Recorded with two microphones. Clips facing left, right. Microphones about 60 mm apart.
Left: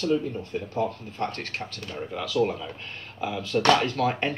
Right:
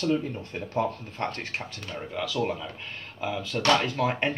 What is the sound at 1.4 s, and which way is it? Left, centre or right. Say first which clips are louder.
Speech: left 1 dB; centre.